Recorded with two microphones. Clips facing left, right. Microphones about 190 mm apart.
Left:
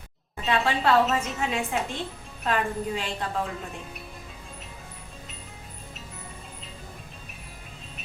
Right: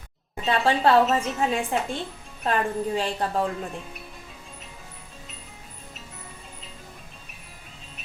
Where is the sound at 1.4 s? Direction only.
35° right (ahead or behind).